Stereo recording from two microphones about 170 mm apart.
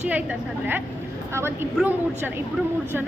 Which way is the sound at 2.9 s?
10° right (ahead or behind).